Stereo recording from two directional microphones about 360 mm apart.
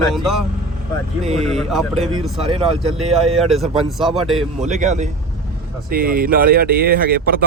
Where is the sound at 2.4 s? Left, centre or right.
Centre.